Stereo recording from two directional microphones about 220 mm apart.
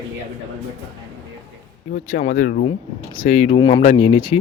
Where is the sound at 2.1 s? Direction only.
35° left (ahead or behind).